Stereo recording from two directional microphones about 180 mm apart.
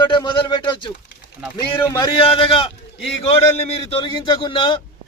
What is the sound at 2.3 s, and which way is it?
A man's voice, 30° left (ahead or behind).